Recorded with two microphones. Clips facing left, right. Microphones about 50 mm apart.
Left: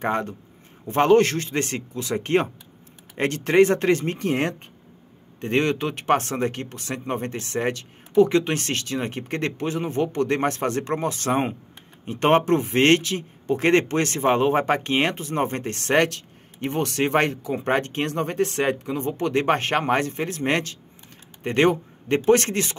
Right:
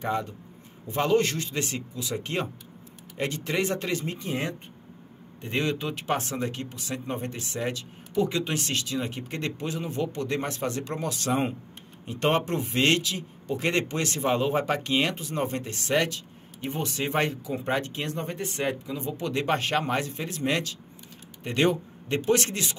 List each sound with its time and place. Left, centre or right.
0.0 s a man's voice: left